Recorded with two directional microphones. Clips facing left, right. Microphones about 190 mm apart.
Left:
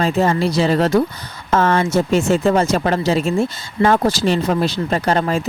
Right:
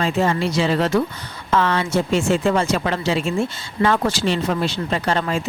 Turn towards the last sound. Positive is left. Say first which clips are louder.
# left 4 dB
turn(degrees=40)  # may be behind; listen again after turning